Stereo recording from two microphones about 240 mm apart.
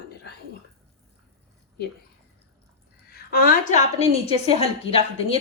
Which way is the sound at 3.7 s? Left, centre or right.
Left.